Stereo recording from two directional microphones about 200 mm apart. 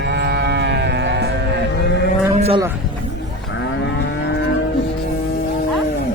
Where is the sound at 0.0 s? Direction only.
55° right (ahead or behind).